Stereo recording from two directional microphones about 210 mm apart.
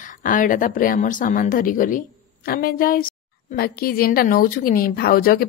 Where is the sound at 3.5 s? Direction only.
45° left (ahead or behind).